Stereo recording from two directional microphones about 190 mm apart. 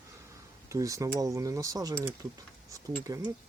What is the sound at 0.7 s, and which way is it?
Speech, 15° right (ahead or behind).